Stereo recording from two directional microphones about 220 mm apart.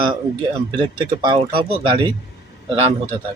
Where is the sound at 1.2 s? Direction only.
20° right (ahead or behind).